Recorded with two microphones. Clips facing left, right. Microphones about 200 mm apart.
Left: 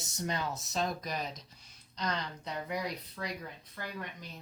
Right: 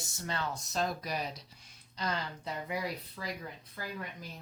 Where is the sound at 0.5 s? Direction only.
Centre (ahead or behind).